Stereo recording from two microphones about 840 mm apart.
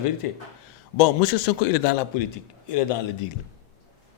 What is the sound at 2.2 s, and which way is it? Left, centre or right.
Speech, left.